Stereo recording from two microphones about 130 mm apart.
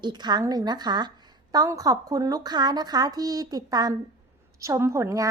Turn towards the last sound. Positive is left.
turn(degrees=-25)  # may be behind; listen again after turning